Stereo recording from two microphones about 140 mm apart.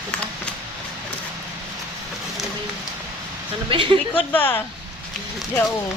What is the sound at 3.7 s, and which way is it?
Speech, 35° right (ahead or behind).